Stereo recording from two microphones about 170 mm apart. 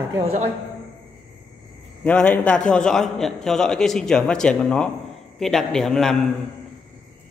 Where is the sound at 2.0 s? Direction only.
10° left (ahead or behind).